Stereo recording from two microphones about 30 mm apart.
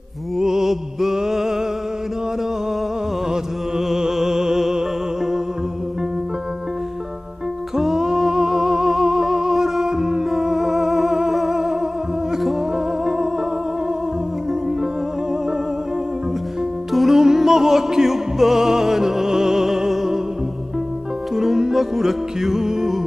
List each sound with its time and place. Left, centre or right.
0.4 s music: centre
3.3 s music: right
7.7 s music: centre
17.1 s music: centre
21.5 s music: centre